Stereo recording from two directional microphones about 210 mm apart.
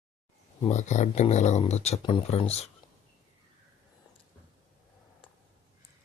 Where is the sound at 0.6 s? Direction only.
35° left (ahead or behind).